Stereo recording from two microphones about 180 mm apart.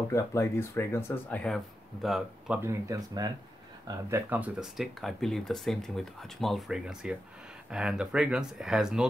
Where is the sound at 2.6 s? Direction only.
15° right (ahead or behind).